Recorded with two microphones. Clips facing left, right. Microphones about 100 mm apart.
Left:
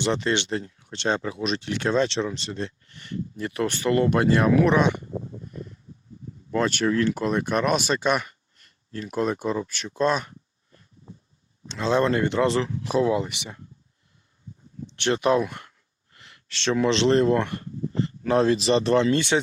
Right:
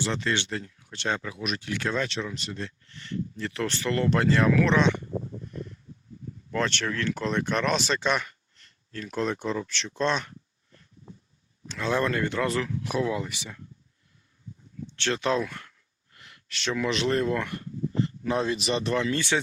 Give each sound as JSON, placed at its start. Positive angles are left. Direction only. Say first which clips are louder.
{"t": 0.0, "sound": "speech", "louder": "left 4 dB", "side_deg": 20}
{"t": 6.5, "sound": "speech", "louder": "left 6 dB", "side_deg": 10}
{"t": 11.7, "sound": "speech", "louder": "left 5 dB", "side_deg": 25}
{"t": 14.8, "sound": "speech", "louder": "left 5 dB", "side_deg": 15}